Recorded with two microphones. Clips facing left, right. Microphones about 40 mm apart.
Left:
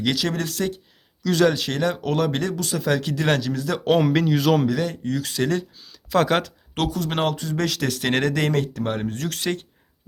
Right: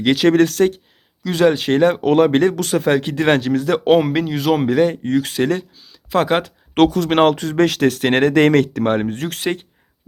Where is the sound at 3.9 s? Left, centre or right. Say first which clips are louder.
Right 1 dB; centre.